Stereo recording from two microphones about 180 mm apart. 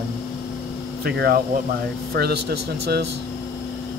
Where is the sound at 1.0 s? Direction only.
60° right (ahead or behind).